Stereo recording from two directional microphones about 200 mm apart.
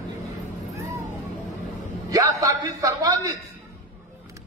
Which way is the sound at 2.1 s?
15° right (ahead or behind).